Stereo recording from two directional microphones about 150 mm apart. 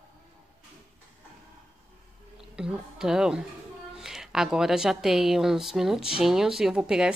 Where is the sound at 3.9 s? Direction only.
5° right (ahead or behind).